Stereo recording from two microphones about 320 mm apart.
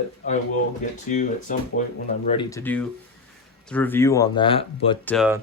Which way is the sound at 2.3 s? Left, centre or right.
Centre.